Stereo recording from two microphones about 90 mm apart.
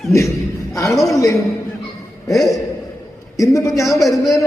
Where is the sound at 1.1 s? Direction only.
35° left (ahead or behind).